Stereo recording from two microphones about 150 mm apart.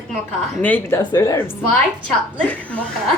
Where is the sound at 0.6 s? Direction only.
15° left (ahead or behind).